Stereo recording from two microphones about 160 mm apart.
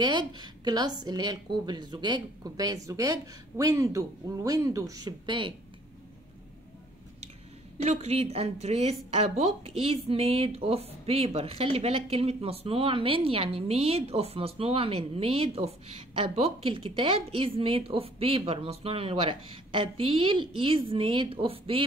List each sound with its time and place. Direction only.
0.0 s a woman's voice: 25° right (ahead or behind)
7.8 s a woman's voice: 40° right (ahead or behind)